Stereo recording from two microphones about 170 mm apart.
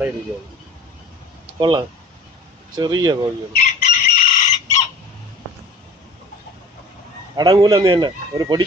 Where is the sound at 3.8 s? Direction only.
45° left (ahead or behind).